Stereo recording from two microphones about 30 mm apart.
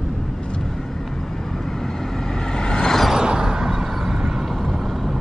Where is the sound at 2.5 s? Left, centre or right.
Left.